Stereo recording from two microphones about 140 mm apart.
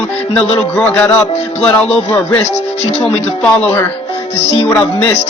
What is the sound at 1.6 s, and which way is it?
Music, 10° left (ahead or behind).